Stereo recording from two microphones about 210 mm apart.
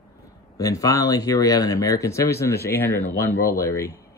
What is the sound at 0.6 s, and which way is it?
Speech, 15° left (ahead or behind).